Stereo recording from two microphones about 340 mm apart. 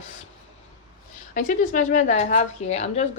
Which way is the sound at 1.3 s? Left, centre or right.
Left.